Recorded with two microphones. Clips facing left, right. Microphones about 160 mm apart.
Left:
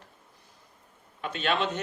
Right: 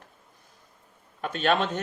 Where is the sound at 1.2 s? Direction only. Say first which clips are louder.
Right 3 dB; 45° right (ahead or behind).